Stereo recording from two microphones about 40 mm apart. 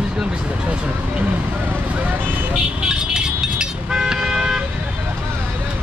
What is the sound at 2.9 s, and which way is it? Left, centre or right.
Vehicle, centre.